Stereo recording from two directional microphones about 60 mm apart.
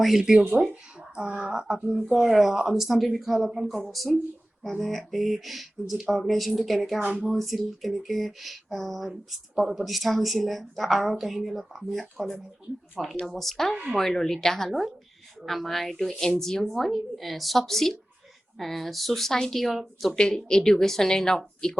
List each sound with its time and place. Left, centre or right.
0.0 s a woman's voice: centre
0.6 s speech: centre
0.9 s a sound: centre
1.4 s a woman's voice: centre
7.0 s speech: right
7.3 s a woman's voice: centre
20.1 s speech: centre